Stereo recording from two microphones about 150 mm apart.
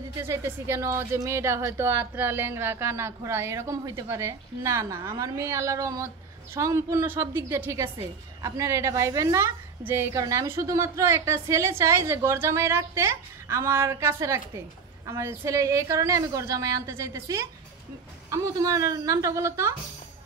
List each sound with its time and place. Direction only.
0.2 s a woman's voice: 15° right (ahead or behind)